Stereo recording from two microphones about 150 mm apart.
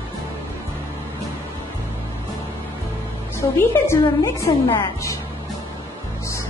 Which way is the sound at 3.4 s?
20° left (ahead or behind).